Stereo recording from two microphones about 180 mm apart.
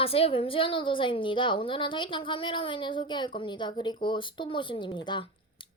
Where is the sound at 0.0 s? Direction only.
30° left (ahead or behind).